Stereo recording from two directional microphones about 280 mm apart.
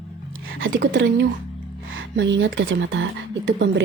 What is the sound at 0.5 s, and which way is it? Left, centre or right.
Speech, right.